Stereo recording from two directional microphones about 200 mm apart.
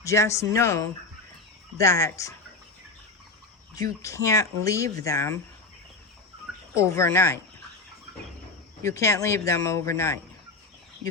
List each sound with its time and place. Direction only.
0.0 s speech: 15° left (ahead or behind)
3.8 s speech: 15° left (ahead or behind)
6.7 s speech: 15° left (ahead or behind)
8.8 s speech: 15° left (ahead or behind)